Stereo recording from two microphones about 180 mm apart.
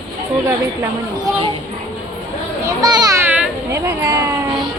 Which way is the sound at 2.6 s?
20° right (ahead or behind).